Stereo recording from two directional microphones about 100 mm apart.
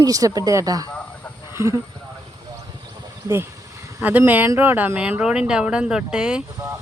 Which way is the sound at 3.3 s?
30° right (ahead or behind).